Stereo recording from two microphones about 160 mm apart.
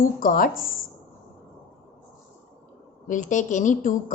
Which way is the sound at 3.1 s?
50° left (ahead or behind).